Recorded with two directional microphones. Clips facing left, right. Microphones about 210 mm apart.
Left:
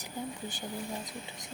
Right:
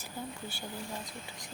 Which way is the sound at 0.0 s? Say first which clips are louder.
Left 3 dB; 15° left (ahead or behind).